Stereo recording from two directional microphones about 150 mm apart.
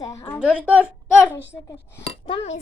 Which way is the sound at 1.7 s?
15° left (ahead or behind).